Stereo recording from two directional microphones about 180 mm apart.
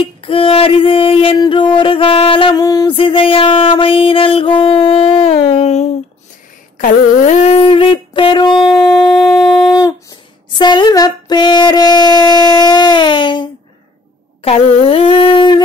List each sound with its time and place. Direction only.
0.0 s music: 30° left (ahead or behind)
8.6 s shofar: centre (ahead or behind)
9.7 s a sound: 20° left (ahead or behind)